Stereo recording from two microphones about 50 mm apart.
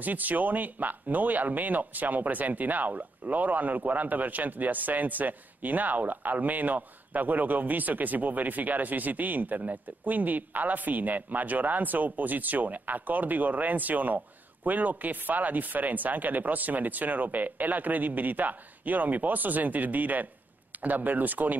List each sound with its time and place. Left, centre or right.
0.0 s speech: right